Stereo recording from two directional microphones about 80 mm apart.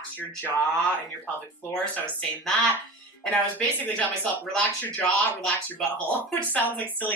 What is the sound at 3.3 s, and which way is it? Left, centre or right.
Speech, centre.